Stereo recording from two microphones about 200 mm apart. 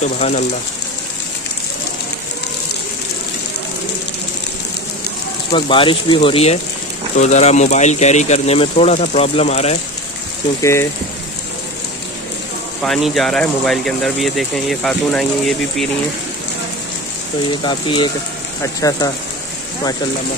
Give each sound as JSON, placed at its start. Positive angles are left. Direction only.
{"t": 0.2, "sound": "speech", "side_deg": 35}
{"t": 5.5, "sound": "speech", "side_deg": 25}
{"t": 10.6, "sound": "speech", "side_deg": 15}
{"t": 12.8, "sound": "speech", "side_deg": 0}
{"t": 17.5, "sound": "speech", "side_deg": 25}